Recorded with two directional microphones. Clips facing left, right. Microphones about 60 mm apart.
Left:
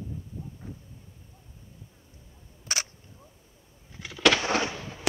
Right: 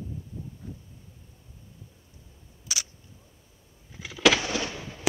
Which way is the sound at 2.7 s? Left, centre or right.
Left.